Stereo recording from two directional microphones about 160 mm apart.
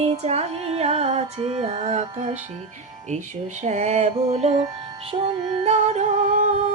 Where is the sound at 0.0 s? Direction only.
40° right (ahead or behind).